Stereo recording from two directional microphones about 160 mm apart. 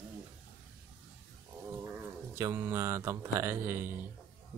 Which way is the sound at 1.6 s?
10° right (ahead or behind).